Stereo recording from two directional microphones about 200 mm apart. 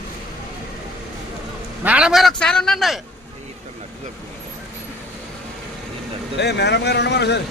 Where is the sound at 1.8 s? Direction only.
5° right (ahead or behind).